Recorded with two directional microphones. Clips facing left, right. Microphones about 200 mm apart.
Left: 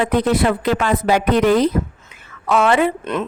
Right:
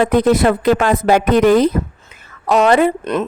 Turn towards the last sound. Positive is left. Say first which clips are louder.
# right 3 dB
turn(degrees=-40)  # may be behind; listen again after turning